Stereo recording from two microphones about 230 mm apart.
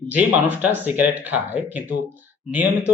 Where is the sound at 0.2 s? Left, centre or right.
Centre.